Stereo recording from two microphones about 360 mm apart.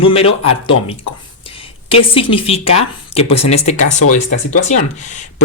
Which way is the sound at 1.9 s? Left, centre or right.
Centre.